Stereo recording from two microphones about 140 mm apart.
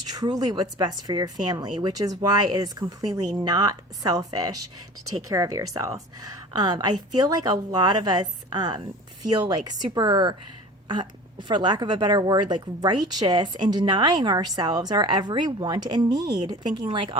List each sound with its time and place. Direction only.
0.1 s a woman's voice: 30° right (ahead or behind)